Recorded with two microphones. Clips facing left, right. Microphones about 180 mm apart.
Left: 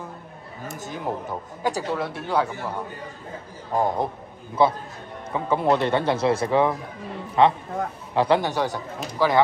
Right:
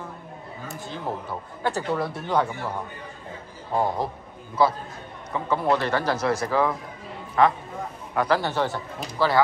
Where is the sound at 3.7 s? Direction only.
20° left (ahead or behind).